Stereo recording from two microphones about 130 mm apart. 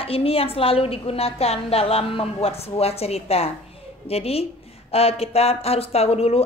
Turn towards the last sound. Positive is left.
turn(degrees=50)  # may be behind; listen again after turning